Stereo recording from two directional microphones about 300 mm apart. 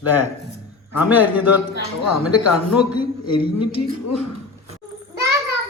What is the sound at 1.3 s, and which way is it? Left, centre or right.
Speech, left.